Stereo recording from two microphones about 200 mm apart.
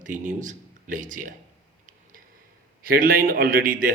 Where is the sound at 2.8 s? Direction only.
45° right (ahead or behind).